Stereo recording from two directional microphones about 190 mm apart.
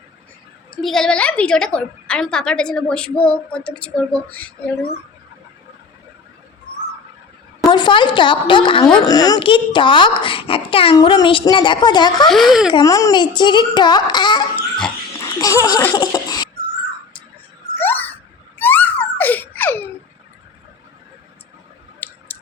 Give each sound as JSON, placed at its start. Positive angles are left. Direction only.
{"t": 0.8, "sound": "a woman's voice", "side_deg": 0}
{"t": 7.7, "sound": "a woman's voice", "side_deg": 25}
{"t": 12.3, "sound": "a woman's voice", "side_deg": 0}
{"t": 12.7, "sound": "a woman's voice", "side_deg": 20}
{"t": 15.2, "sound": "laughter", "side_deg": 15}
{"t": 16.0, "sound": "a sound", "side_deg": 20}
{"t": 17.7, "sound": "a sound", "side_deg": 10}
{"t": 18.6, "sound": "baby laughter", "side_deg": 10}
{"t": 22.3, "sound": "a sound", "side_deg": 10}